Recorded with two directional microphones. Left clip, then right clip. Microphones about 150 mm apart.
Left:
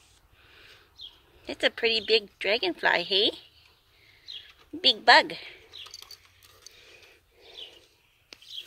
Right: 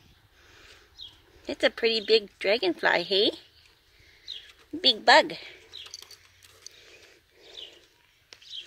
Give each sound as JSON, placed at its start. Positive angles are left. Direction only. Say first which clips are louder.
{"t": 1.4, "sound": "speech", "louder": "right 1 dB", "side_deg": -50}
{"t": 5.0, "sound": "a woman's voice", "louder": "even", "side_deg": -40}